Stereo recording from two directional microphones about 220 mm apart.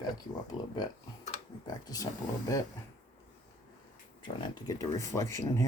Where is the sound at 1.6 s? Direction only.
15° left (ahead or behind).